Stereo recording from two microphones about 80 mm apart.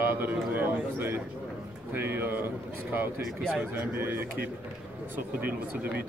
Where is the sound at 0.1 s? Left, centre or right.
Right.